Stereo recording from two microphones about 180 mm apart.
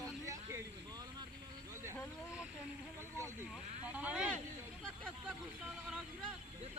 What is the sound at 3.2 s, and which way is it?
Speech, 15° right (ahead or behind).